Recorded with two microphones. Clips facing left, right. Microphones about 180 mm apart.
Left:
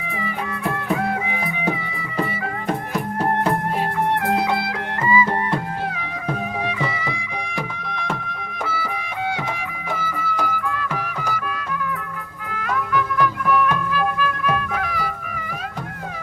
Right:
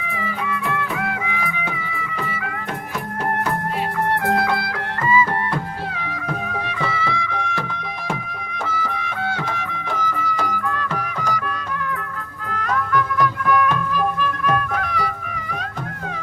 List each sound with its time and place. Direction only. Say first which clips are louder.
0.7 s music: left 2 dB; 35° left (ahead or behind)
4.4 s music: even; 20° left (ahead or behind)
6.8 s music: right 3 dB; 15° left (ahead or behind)
8.6 s music: right 1 dB; 10° left (ahead or behind)
12.5 s music: right 2 dB; 5° left (ahead or behind)